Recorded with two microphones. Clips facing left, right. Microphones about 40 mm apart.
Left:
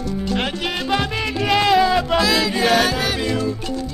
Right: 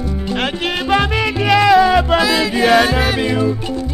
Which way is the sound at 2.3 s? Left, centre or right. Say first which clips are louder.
Right 4 dB; centre.